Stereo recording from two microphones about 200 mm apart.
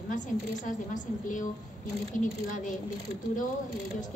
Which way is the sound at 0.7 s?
40° left (ahead or behind).